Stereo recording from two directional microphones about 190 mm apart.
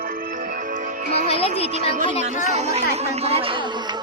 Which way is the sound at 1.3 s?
30° left (ahead or behind).